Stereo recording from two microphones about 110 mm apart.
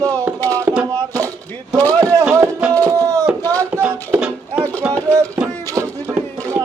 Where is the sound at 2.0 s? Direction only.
30° right (ahead or behind).